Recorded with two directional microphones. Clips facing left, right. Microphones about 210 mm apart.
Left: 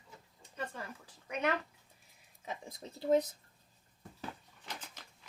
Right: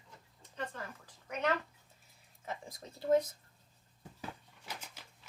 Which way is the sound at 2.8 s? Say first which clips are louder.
Left 7 dB; 30° left (ahead or behind).